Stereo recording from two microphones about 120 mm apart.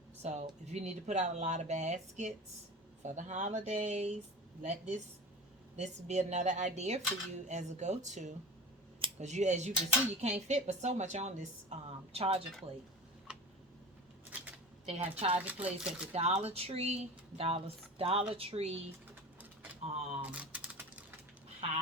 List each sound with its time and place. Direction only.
0.2 s speech: 70° right (ahead or behind); by 8.4 s 90° right
9.1 s speech: 75° right (ahead or behind)
11.9 s speech: 55° right (ahead or behind)
14.8 s speech: 55° right (ahead or behind)
15.4 s speech: 10° right (ahead or behind)
16.1 s speech: 60° right (ahead or behind)
19.8 s typewriter: 60° right (ahead or behind)
20.3 s typing: 10° right (ahead or behind)